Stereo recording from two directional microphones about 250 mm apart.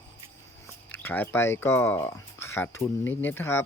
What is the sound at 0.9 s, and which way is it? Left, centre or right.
Speech, centre.